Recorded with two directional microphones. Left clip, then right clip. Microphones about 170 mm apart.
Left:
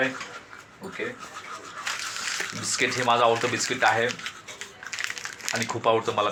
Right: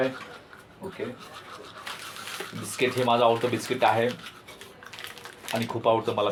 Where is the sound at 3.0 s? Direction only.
30° left (ahead or behind).